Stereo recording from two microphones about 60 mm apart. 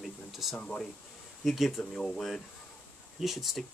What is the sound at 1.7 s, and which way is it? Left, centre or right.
Speech, centre.